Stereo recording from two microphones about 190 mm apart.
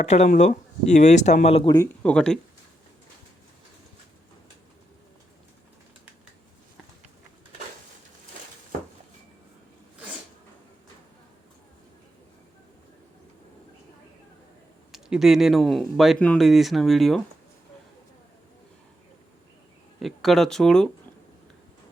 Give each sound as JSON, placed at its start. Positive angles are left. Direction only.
{"t": 0.0, "sound": "speech", "side_deg": 35}
{"t": 2.0, "sound": "speech", "side_deg": 5}
{"t": 14.9, "sound": "speech", "side_deg": 0}
{"t": 20.0, "sound": "speech", "side_deg": 0}